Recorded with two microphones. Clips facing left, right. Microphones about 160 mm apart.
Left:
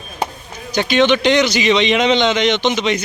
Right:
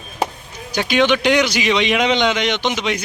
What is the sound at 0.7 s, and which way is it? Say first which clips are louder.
A man's voice: left 2 dB; 10° right (ahead or behind).